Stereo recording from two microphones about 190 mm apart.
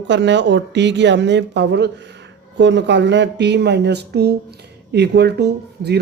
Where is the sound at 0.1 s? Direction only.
65° right (ahead or behind).